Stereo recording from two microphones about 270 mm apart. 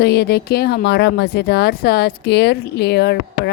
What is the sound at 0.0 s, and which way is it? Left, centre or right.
A woman's voice, left.